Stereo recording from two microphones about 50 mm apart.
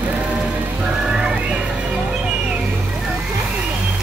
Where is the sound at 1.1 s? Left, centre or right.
Centre.